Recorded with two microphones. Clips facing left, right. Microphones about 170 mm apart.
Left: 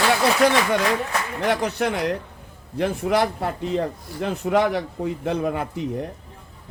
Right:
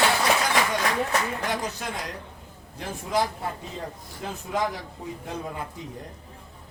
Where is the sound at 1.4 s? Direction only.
70° left (ahead or behind).